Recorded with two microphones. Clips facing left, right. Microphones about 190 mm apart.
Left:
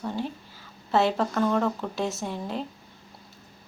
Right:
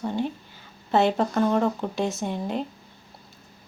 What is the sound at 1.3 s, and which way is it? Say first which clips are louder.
Speech: right 2 dB; 20° right (ahead or behind).